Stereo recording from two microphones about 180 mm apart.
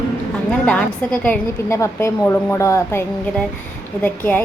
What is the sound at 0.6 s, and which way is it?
A woman's voice, 5° left (ahead or behind).